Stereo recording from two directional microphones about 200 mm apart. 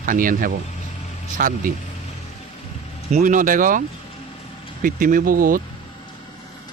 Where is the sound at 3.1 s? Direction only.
35° right (ahead or behind).